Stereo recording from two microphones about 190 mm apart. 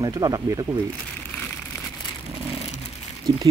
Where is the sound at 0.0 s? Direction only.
20° right (ahead or behind).